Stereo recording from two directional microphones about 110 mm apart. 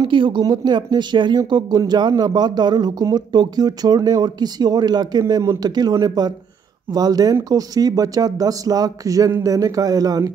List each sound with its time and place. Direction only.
0.0 s speech: 45° right (ahead or behind)